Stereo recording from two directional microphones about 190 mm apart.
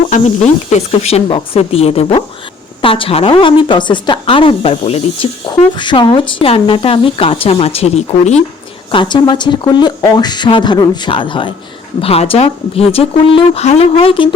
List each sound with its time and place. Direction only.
0.1 s a woman's voice: 35° left (ahead or behind)
8.9 s a woman's voice: 25° left (ahead or behind)